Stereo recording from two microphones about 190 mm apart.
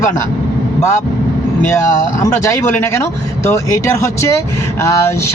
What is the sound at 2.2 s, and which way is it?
Speech, 15° left (ahead or behind).